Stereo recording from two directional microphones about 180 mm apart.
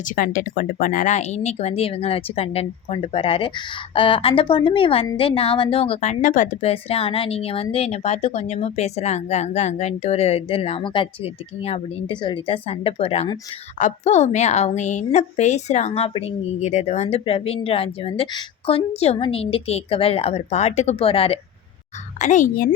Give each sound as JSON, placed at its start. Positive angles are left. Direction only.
{"t": 0.2, "sound": "a woman's voice", "side_deg": 50}
{"t": 22.2, "sound": "a child's voice", "side_deg": 45}